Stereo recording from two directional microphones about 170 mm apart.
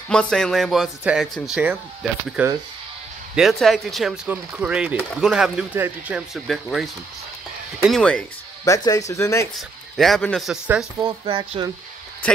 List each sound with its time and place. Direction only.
0.1 s speech: 5° left (ahead or behind)
8.6 s speech: 20° left (ahead or behind)
9.6 s speech: centre (ahead or behind)
11.0 s speech: 30° right (ahead or behind)